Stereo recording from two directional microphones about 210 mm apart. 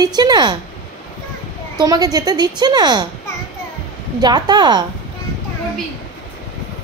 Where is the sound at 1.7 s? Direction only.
20° right (ahead or behind).